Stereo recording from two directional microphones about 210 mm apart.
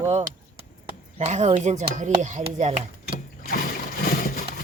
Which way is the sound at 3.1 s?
45° left (ahead or behind).